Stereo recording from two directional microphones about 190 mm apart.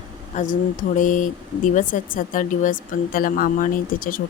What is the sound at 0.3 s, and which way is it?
Speech, 45° left (ahead or behind).